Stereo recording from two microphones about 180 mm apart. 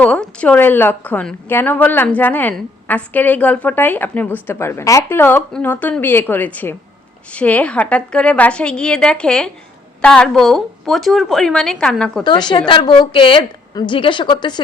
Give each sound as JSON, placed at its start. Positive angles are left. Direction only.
{"t": 0.0, "sound": "a woman's voice", "side_deg": 5}
{"t": 12.2, "sound": "a woman's voice", "side_deg": 25}